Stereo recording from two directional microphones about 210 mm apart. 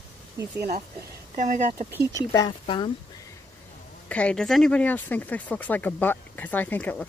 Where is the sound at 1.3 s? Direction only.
35° right (ahead or behind).